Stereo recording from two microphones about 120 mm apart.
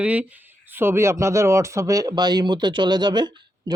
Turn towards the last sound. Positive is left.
turn(degrees=-40)  # may be behind; listen again after turning